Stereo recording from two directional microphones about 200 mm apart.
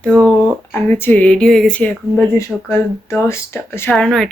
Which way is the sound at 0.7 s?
10° left (ahead or behind).